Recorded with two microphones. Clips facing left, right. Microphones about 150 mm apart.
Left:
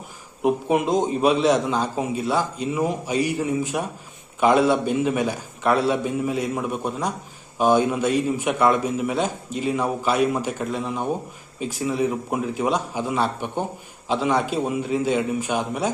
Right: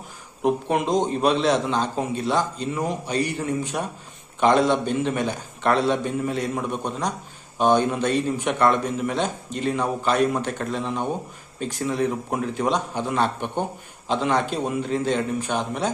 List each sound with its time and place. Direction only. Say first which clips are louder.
0.4 s a man's voice: left 1 dB; 5° left (ahead or behind)